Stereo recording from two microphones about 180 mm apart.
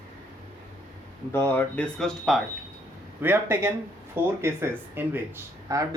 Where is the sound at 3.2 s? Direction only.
10° right (ahead or behind).